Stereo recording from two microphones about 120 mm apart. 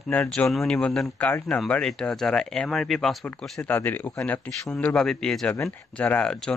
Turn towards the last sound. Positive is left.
turn(degrees=5)  # may be behind; listen again after turning